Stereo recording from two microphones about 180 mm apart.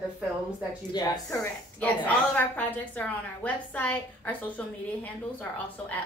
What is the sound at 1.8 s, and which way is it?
A woman's voice, 10° left (ahead or behind).